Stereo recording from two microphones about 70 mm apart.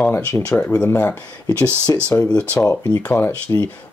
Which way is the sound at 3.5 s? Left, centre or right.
Left.